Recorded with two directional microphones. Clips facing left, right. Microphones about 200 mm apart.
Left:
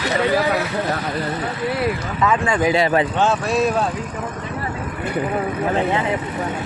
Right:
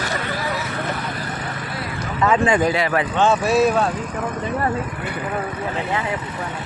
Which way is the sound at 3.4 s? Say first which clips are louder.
Right 2 dB; 5° right (ahead or behind).